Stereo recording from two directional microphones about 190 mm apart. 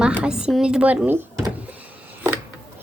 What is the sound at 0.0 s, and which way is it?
A woman's voice, 5° right (ahead or behind).